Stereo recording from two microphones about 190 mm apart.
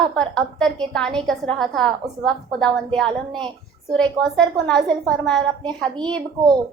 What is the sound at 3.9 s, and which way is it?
A woman's voice, 5° left (ahead or behind).